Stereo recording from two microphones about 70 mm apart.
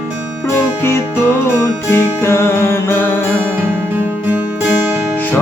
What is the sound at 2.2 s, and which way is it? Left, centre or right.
Music, left.